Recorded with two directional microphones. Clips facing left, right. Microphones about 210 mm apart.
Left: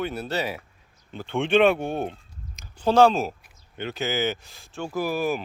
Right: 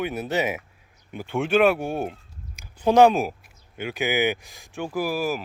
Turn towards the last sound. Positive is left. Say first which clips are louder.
# even
turn(degrees=-5)  # may be behind; listen again after turning